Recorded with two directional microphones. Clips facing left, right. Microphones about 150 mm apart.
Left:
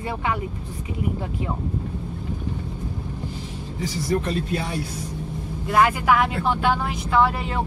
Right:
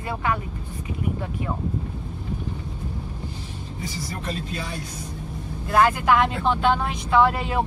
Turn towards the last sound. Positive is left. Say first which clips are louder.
# right 1 dB
turn(degrees=0)  # may be behind; listen again after turning